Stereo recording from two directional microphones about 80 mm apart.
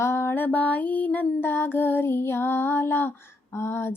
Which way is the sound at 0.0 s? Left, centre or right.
Left.